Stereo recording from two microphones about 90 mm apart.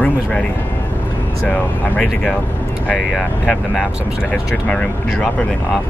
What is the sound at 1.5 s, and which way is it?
Speech, 15° left (ahead or behind).